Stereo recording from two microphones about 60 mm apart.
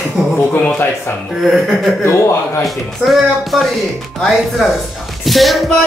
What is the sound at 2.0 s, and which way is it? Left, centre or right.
Speech, left.